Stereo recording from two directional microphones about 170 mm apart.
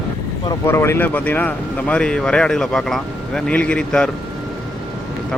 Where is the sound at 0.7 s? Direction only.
15° left (ahead or behind).